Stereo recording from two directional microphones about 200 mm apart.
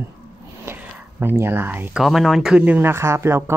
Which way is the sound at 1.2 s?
10° right (ahead or behind).